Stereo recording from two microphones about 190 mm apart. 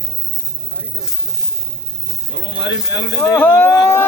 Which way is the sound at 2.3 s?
70° left (ahead or behind).